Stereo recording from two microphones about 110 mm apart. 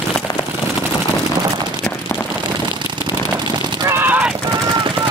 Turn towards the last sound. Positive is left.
turn(degrees=-15)  # may be behind; listen again after turning